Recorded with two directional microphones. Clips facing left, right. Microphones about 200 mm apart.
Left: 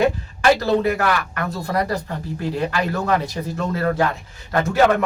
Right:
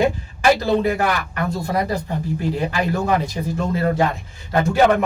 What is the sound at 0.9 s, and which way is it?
Speech, 15° right (ahead or behind).